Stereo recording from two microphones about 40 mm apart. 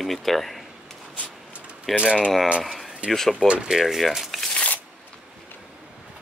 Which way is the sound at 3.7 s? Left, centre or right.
Centre.